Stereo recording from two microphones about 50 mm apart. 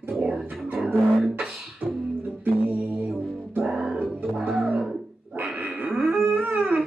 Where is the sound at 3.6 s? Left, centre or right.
Centre.